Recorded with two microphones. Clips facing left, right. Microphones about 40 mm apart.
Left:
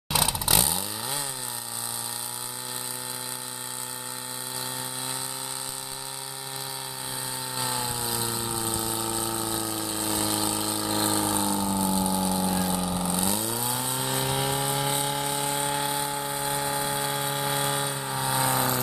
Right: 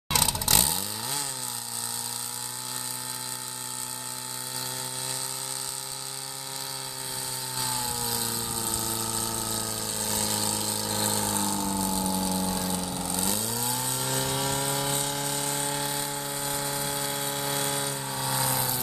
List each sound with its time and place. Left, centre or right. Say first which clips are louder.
0.1 s vehicle: left 1 dB; centre
7.5 s pump: left 2 dB; centre